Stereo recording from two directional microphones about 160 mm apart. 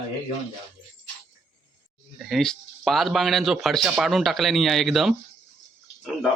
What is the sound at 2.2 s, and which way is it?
A man's voice, centre (ahead or behind).